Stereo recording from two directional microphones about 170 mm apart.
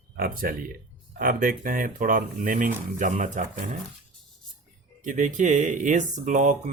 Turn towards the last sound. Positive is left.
turn(degrees=-45)  # may be behind; listen again after turning